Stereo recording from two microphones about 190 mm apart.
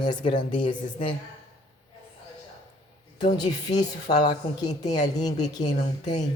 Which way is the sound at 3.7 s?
35° left (ahead or behind).